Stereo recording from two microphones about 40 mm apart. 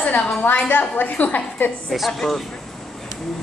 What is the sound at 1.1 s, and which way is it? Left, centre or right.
Speech, left.